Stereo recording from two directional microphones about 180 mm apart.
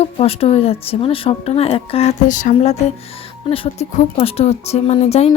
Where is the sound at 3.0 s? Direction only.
30° left (ahead or behind).